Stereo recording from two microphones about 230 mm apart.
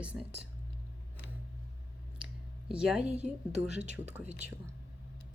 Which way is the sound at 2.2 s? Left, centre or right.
Centre.